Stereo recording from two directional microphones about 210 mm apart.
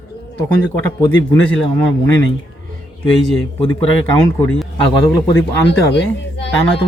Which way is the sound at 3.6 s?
25° left (ahead or behind).